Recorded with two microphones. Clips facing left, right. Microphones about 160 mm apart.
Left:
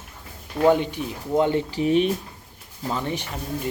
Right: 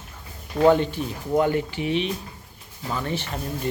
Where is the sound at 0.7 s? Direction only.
15° left (ahead or behind).